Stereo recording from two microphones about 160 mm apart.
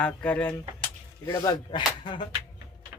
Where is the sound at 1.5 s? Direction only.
30° left (ahead or behind).